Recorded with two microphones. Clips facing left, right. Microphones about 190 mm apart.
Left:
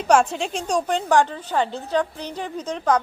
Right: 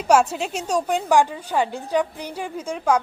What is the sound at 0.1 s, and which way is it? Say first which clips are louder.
A woman's voice: even; 5° right (ahead or behind).